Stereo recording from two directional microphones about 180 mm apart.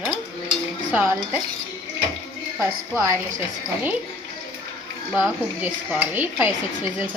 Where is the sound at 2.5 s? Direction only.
15° right (ahead or behind).